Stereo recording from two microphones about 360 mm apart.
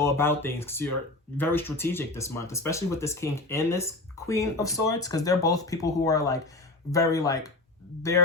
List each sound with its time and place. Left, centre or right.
0.0 s speech: centre